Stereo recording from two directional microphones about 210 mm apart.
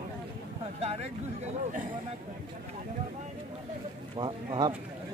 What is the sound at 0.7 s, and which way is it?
Speech, 30° right (ahead or behind).